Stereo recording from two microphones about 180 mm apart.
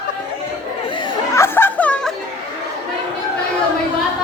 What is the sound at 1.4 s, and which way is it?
Chatter, 10° left (ahead or behind).